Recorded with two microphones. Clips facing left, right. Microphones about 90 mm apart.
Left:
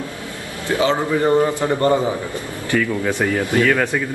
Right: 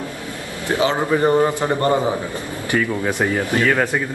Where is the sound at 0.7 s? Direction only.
20° right (ahead or behind).